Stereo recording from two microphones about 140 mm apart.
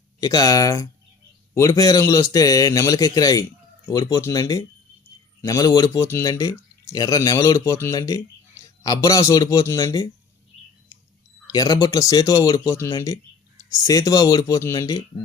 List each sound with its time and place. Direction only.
0.2 s speech: 25° left (ahead or behind)
11.4 s speech: 25° left (ahead or behind)